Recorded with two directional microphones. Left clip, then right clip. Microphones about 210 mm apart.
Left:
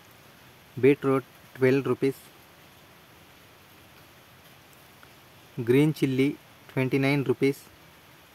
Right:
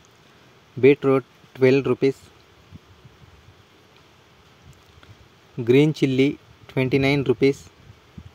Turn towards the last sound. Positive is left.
turn(degrees=-15)  # may be behind; listen again after turning